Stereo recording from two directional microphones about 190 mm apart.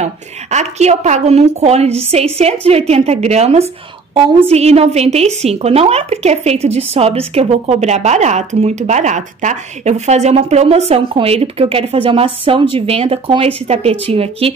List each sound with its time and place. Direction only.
0.0 s a woman's voice: 35° right (ahead or behind)